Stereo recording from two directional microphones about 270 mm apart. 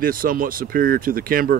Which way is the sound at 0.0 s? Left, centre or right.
Right.